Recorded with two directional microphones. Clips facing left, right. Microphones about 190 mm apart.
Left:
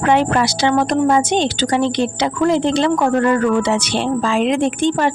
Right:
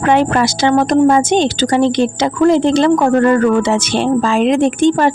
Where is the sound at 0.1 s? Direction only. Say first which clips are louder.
Right 3 dB; 50° right (ahead or behind).